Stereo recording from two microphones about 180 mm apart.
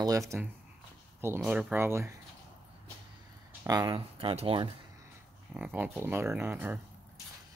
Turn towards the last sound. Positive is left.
turn(degrees=-10)  # may be behind; listen again after turning